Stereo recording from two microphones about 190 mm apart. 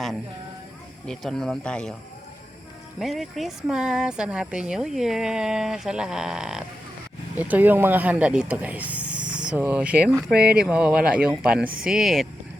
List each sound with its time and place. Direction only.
1.0 s speech: 5° left (ahead or behind)
3.0 s speech: centre (ahead or behind)
10.3 s speech: 55° right (ahead or behind)
10.6 s speech: 5° right (ahead or behind)